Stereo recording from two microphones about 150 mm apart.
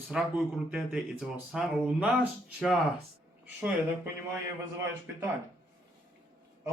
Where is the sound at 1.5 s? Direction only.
5° right (ahead or behind).